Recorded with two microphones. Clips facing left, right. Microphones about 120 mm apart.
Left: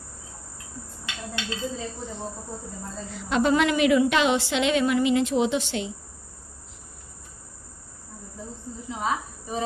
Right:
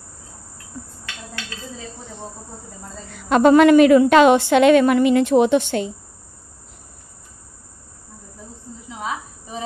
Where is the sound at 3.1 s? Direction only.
55° right (ahead or behind).